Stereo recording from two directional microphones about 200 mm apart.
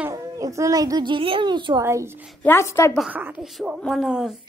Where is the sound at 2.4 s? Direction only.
10° left (ahead or behind).